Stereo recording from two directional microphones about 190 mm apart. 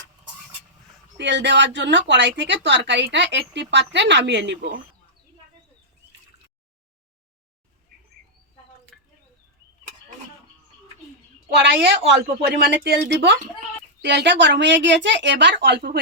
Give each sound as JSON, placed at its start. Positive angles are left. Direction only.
{"t": 1.2, "sound": "a woman's voice", "side_deg": -65}
{"t": 8.9, "sound": "a sound", "side_deg": 5}
{"t": 11.5, "sound": "a woman's voice", "side_deg": -65}